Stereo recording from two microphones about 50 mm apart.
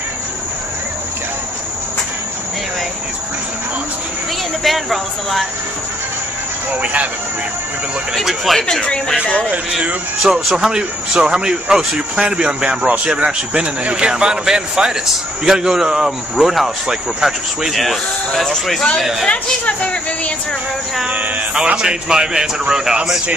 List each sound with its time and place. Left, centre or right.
4.6 s speech: centre
6.8 s speech: right
8.1 s speech: centre
10.2 s speech: centre
17.7 s speech: centre
19.2 s a woman's voice: left
21.5 s speech: centre